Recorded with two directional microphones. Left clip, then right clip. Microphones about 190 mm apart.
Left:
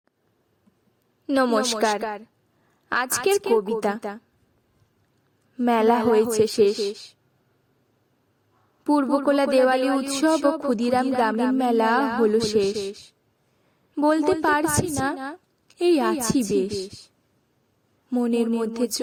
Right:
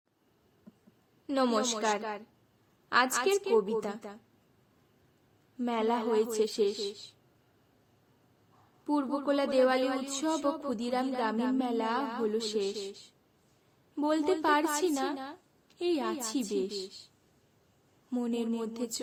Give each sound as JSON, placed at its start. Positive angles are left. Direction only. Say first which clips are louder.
{"t": 1.3, "sound": "speech", "louder": "left 8 dB", "side_deg": 40}
{"t": 5.5, "sound": "speech", "louder": "left 11 dB", "side_deg": 45}
{"t": 8.8, "sound": "speech", "louder": "left 11 dB", "side_deg": 45}
{"t": 18.1, "sound": "speech", "louder": "left 10 dB", "side_deg": 40}